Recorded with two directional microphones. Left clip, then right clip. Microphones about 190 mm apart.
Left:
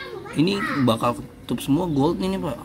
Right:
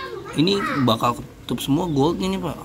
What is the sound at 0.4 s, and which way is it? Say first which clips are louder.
A man's voice: right 2 dB; centre (ahead or behind).